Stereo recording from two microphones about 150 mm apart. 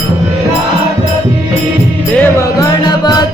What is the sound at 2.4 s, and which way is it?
Music, 25° left (ahead or behind).